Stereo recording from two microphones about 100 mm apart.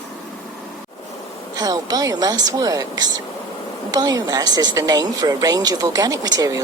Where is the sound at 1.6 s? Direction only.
40° right (ahead or behind).